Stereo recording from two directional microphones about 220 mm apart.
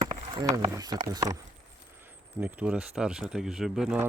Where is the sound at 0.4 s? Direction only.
15° right (ahead or behind).